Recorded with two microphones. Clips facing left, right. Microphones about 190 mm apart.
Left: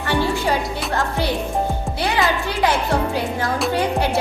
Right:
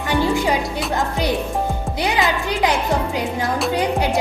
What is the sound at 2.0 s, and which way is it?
Music, 15° right (ahead or behind).